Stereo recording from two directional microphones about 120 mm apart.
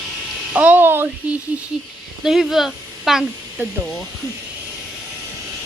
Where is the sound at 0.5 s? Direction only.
15° right (ahead or behind).